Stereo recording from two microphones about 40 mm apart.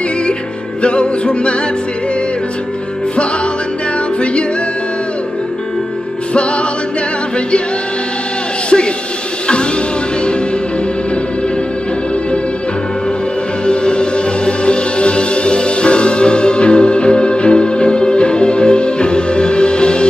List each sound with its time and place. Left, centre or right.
0.8 s music: left
4.2 s music: left
8.6 s a sound: left
13.7 s music: left